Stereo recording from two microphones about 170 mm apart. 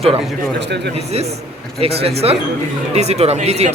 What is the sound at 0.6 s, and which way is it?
Speech, 85° right.